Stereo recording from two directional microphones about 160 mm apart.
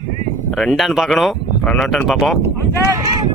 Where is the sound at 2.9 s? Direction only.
25° right (ahead or behind).